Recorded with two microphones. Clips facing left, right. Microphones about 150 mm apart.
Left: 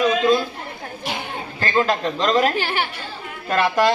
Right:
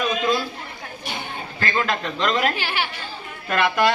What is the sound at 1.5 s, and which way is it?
Speech, 30° left (ahead or behind).